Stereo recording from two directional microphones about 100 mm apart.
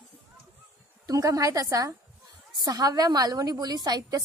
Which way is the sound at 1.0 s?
35° right (ahead or behind).